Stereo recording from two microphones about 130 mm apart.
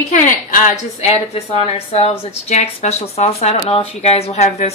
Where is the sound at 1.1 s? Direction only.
50° left (ahead or behind).